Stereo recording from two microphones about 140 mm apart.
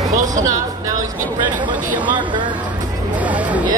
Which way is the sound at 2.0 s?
35° right (ahead or behind).